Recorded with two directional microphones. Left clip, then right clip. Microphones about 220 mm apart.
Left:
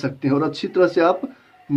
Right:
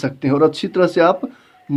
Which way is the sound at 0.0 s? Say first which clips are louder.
Right 6 dB; 50° right (ahead or behind).